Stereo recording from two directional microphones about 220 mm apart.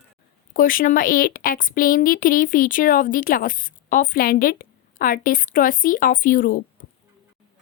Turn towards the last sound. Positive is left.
turn(degrees=40)  # may be behind; listen again after turning